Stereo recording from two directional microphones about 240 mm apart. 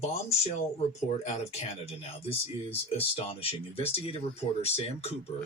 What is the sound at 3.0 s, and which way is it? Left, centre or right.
Speech, left.